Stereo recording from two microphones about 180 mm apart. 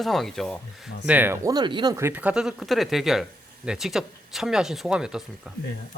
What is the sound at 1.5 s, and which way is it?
Speech, 25° right (ahead or behind).